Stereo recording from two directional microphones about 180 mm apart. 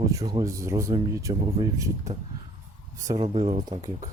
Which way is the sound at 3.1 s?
35° right (ahead or behind).